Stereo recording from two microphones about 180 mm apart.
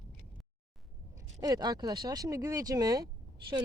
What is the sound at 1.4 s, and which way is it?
Speech, 20° right (ahead or behind).